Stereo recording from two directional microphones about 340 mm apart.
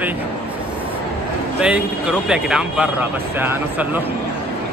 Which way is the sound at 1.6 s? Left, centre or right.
Centre.